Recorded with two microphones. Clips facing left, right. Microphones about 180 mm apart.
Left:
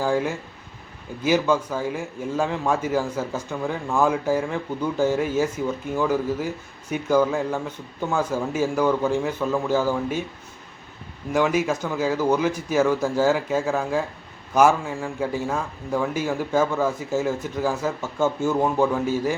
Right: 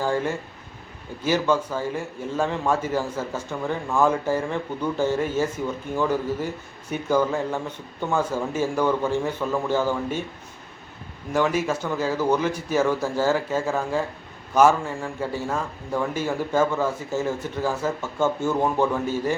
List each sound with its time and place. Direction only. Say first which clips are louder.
0.0 s a man's voice: left 1 dB; 10° left (ahead or behind)
11.3 s a man's voice: left 1 dB; 10° left (ahead or behind)